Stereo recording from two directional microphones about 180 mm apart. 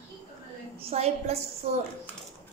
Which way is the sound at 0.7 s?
35° right (ahead or behind).